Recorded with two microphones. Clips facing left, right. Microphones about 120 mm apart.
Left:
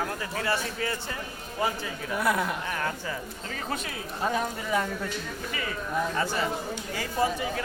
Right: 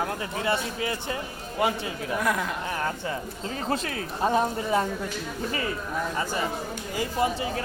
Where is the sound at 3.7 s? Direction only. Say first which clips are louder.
Right 5 dB; 35° right (ahead or behind).